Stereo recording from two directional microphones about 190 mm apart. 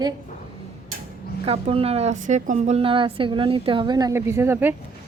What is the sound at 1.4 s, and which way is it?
A woman's voice, 30° right (ahead or behind).